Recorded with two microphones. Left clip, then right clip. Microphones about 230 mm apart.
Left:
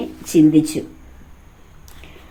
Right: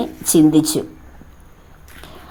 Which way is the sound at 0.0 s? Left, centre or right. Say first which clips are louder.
Even; right.